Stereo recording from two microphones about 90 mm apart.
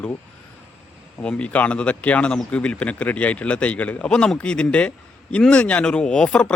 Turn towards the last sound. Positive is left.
turn(degrees=10)  # may be behind; listen again after turning